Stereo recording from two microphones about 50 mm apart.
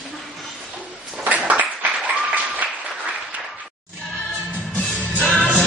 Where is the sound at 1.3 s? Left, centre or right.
Right.